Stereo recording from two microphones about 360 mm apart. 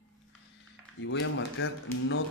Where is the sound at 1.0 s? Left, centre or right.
Left.